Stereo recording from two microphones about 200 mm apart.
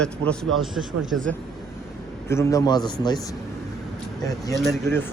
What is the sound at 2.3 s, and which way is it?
Speech, 15° left (ahead or behind).